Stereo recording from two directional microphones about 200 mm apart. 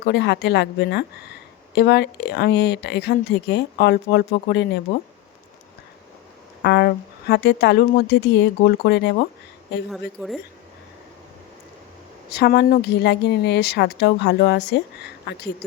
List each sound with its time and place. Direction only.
0.0 s speech: 55° left (ahead or behind)
6.6 s speech: 55° left (ahead or behind)
9.9 s a woman's voice: centre (ahead or behind)
12.3 s speech: 55° left (ahead or behind)